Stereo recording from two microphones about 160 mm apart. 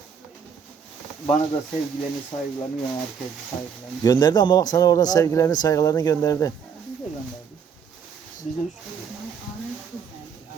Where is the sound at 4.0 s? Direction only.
25° left (ahead or behind).